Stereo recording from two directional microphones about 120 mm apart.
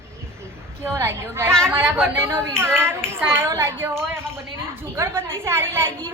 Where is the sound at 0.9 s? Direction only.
20° right (ahead or behind).